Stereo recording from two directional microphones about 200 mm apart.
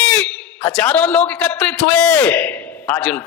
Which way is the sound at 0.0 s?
5° left (ahead or behind).